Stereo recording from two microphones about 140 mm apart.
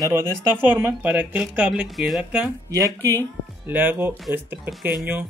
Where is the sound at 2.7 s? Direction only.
20° right (ahead or behind).